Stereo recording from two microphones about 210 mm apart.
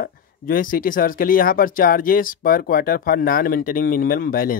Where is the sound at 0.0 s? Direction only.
40° left (ahead or behind).